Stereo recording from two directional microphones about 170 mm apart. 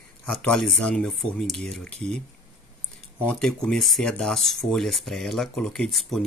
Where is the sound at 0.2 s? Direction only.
5° left (ahead or behind).